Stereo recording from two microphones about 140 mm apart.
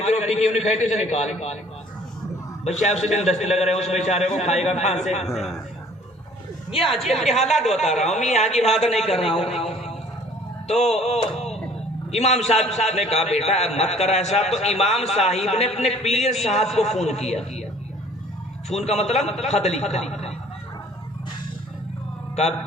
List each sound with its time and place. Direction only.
0.0 s a man's voice: 55° left (ahead or behind)
2.6 s a man's voice: 55° left (ahead or behind)
5.2 s a man's voice: 5° right (ahead or behind)
6.9 s a man's voice: centre (ahead or behind)
7.3 s a man's voice: 50° left (ahead or behind)
7.5 s a man's voice: centre (ahead or behind)
8.0 s a man's voice: 55° left (ahead or behind)
9.6 s a sound: 45° left (ahead or behind)
12.1 s a man's voice: 50° left (ahead or behind)
18.7 s a man's voice: 50° left (ahead or behind)